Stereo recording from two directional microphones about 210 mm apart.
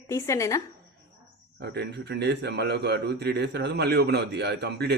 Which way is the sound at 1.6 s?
55° right (ahead or behind).